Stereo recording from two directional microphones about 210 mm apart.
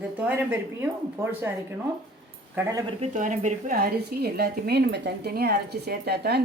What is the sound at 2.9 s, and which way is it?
A woman's voice, 35° right (ahead or behind).